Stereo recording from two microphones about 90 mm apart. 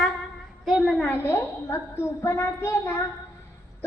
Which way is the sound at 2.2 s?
30° left (ahead or behind).